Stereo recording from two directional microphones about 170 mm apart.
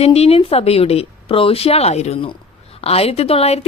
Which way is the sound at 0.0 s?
35° left (ahead or behind).